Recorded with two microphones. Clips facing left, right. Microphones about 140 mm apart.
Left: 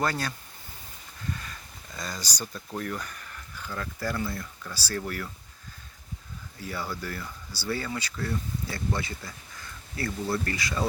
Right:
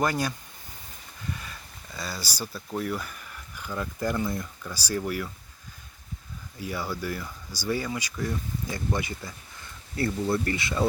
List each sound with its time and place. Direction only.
0.0 s speech: 15° right (ahead or behind)
1.4 s speech: 5° right (ahead or behind)
6.6 s speech: 15° right (ahead or behind)